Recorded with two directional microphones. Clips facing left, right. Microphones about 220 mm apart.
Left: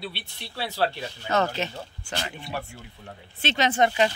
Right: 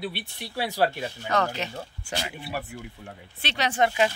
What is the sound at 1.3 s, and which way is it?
Speech, 25° left (ahead or behind).